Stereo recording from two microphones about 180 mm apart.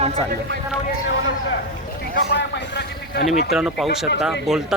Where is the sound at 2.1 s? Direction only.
65° left (ahead or behind).